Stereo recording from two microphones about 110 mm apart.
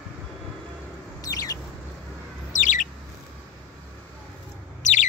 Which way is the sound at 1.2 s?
35° left (ahead or behind).